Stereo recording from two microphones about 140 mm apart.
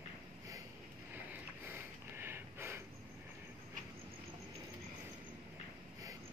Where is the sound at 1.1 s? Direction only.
15° right (ahead or behind).